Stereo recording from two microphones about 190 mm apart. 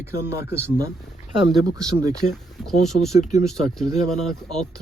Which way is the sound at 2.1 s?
Centre (ahead or behind).